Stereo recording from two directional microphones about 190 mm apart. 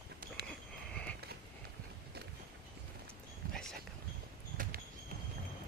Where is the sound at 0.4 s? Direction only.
60° right (ahead or behind).